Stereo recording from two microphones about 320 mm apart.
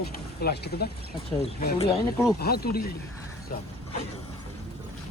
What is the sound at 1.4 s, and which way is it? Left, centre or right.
Speech, centre.